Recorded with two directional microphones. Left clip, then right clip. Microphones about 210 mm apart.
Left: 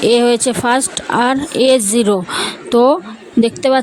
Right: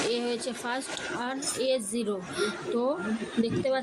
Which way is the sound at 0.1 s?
50° left (ahead or behind).